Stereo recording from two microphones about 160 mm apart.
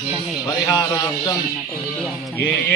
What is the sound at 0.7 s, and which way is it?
Speech, 20° left (ahead or behind).